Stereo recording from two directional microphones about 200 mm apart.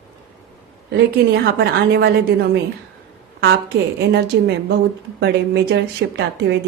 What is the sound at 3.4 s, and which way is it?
A woman's voice, 60° right (ahead or behind).